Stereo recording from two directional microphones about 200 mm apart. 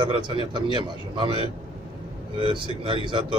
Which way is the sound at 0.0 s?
25° right (ahead or behind).